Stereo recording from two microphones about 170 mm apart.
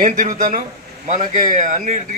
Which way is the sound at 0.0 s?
50° right (ahead or behind).